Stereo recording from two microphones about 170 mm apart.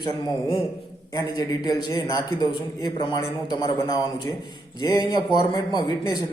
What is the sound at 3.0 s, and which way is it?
A man's voice, 25° left (ahead or behind).